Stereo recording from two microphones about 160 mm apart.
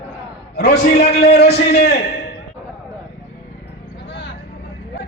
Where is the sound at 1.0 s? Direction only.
90° left.